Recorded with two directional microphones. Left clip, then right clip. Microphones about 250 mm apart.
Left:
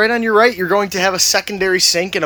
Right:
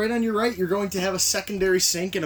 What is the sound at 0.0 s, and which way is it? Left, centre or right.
Speech, centre.